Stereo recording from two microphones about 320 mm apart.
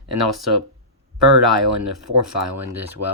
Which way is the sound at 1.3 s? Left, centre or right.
Right.